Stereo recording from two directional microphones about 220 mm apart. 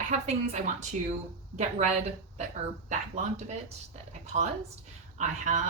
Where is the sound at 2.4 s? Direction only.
30° right (ahead or behind).